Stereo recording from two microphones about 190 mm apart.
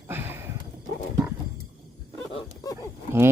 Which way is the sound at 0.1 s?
10° right (ahead or behind).